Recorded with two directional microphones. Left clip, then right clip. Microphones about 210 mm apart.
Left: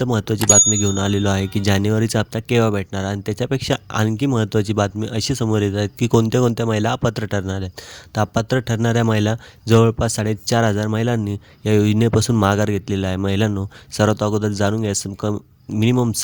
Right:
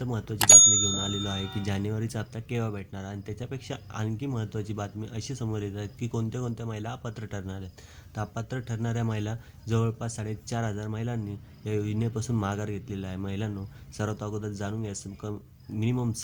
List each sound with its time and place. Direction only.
0.0 s speech: 45° left (ahead or behind)
0.3 s speech: centre (ahead or behind)
0.7 s speech: 50° left (ahead or behind)